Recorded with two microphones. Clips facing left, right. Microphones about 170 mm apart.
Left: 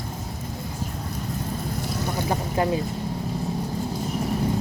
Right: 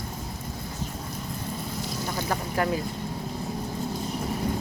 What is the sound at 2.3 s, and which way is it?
Speech, 20° left (ahead or behind).